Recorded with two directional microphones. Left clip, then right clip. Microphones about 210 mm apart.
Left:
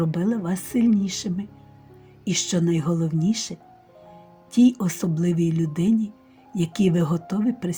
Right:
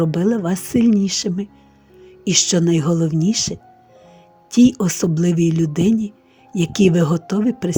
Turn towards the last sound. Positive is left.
turn(degrees=-40)  # may be behind; listen again after turning